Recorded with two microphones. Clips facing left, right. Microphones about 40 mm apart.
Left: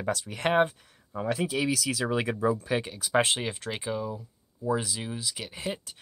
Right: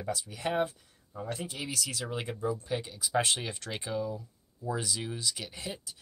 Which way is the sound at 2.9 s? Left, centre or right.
Left.